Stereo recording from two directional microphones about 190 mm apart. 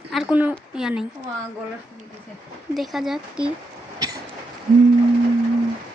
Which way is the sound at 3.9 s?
20° right (ahead or behind).